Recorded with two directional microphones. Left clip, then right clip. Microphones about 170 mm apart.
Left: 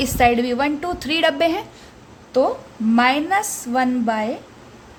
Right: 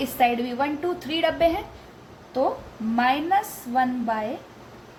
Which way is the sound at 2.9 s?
75° left (ahead or behind).